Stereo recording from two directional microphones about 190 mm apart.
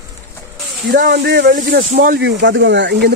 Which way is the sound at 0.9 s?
65° right (ahead or behind).